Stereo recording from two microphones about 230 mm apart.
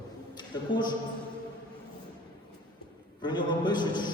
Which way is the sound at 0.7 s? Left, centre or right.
Centre.